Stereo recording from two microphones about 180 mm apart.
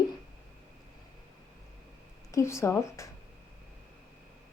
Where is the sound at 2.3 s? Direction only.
15° left (ahead or behind).